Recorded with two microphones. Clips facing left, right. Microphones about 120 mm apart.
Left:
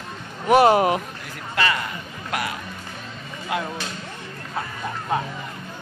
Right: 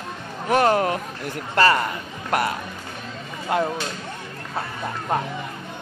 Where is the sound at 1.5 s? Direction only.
40° right (ahead or behind).